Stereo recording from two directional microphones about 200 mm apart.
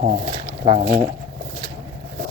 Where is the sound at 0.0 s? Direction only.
30° right (ahead or behind).